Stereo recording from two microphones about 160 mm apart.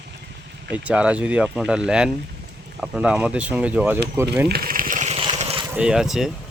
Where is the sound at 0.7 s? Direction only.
10° right (ahead or behind).